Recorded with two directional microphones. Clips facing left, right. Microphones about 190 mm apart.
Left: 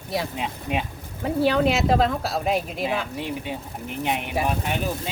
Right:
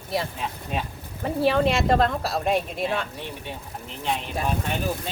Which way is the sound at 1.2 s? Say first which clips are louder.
Left 1 dB; centre (ahead or behind).